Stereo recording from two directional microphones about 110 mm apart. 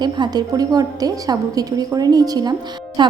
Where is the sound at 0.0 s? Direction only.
40° right (ahead or behind).